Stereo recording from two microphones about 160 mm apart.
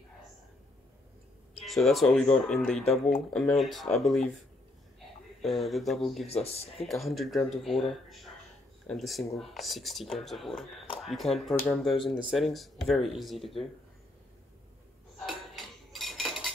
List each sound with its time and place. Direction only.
1.6 s speech: centre (ahead or behind)
2.7 s speech: 40° left (ahead or behind)
3.1 s speech: centre (ahead or behind)
5.4 s speech: centre (ahead or behind)
15.1 s cutlery: centre (ahead or behind)